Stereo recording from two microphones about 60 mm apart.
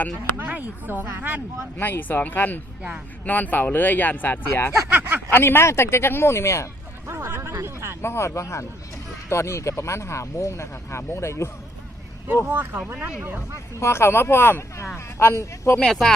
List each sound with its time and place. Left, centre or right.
0.3 s speech: right
1.8 s speech: left
4.9 s speech: right
5.3 s speech: left
7.1 s a sound: right
8.0 s speech: left
12.5 s speech: right
13.7 s speech: left
15.8 s speech: centre